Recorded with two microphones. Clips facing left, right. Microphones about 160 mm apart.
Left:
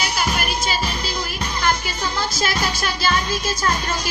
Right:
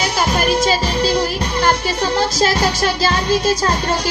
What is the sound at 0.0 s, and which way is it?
Music, 40° right (ahead or behind).